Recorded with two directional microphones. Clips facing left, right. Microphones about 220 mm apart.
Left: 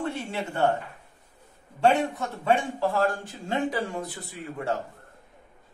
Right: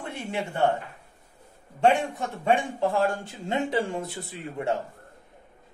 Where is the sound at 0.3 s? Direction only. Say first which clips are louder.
Right 4 dB; 15° right (ahead or behind).